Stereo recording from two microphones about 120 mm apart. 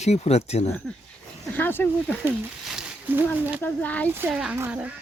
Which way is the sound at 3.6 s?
15° left (ahead or behind).